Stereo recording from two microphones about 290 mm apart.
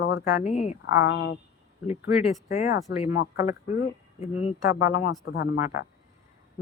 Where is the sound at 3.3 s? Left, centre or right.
Centre.